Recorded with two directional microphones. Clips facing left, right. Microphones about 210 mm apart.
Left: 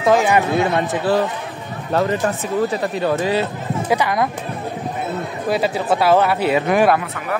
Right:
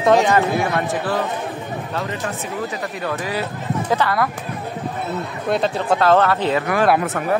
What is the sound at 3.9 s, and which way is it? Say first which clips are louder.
Speech: left 1 dB; 15° left (ahead or behind).